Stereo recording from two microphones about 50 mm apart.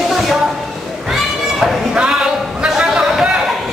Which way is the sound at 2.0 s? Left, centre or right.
Centre.